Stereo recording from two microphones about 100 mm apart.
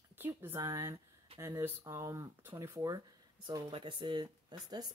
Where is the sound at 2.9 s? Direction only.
45° right (ahead or behind).